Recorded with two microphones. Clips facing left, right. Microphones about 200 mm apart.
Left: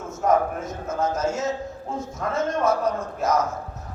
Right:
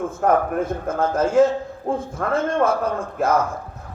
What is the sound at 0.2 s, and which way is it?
A man's voice, 55° right (ahead or behind).